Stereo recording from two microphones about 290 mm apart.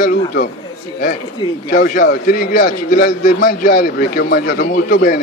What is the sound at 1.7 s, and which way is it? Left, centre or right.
A man's voice, left.